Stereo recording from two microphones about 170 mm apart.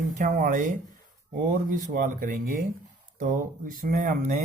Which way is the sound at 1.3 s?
55° right (ahead or behind).